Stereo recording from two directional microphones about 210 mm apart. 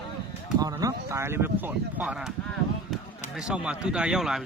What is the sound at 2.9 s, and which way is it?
Basketball bounce, centre (ahead or behind).